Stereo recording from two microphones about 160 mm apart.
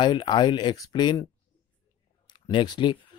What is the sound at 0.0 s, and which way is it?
Speech, 30° left (ahead or behind).